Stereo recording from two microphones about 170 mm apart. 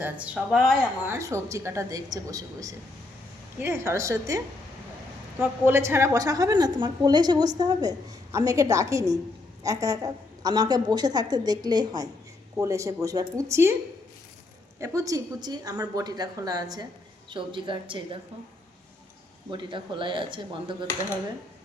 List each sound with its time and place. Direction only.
0.0 s speech: 5° right (ahead or behind)
1.0 s a woman's voice: 15° right (ahead or behind)
5.6 s a woman's voice: 15° right (ahead or behind)
14.8 s a woman's voice: 20° right (ahead or behind)
19.5 s a woman's voice: 30° right (ahead or behind)